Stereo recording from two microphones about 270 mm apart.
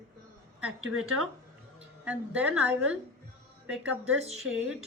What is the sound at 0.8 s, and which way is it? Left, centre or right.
Speech, right.